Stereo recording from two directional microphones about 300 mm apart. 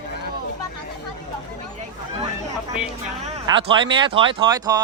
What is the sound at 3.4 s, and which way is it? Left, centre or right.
Speech, centre.